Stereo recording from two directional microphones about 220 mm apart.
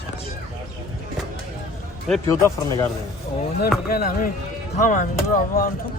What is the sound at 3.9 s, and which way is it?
Speech, 40° left (ahead or behind).